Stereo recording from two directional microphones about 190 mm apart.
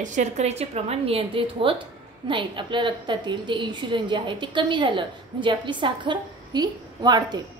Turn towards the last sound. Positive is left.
turn(degrees=-20)  # may be behind; listen again after turning